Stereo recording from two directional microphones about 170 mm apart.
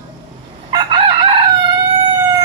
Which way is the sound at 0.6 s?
25° right (ahead or behind).